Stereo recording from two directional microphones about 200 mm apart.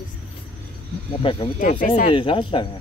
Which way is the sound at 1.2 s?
25° left (ahead or behind).